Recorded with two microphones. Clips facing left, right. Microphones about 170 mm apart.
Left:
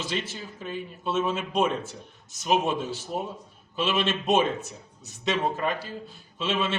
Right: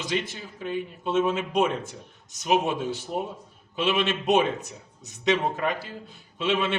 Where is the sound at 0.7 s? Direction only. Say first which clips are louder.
Right 3 dB; 15° right (ahead or behind).